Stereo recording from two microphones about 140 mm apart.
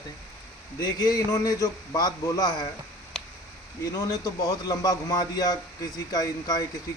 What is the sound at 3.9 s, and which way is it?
A man's voice, 25° left (ahead or behind).